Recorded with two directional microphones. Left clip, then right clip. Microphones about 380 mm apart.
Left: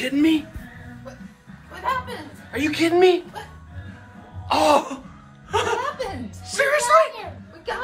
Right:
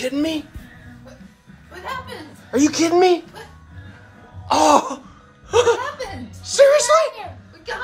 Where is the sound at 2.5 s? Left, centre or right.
Right.